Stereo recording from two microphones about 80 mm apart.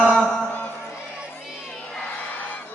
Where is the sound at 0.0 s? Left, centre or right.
Centre.